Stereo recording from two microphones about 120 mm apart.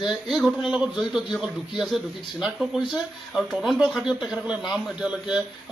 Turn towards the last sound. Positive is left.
turn(degrees=-5)  # may be behind; listen again after turning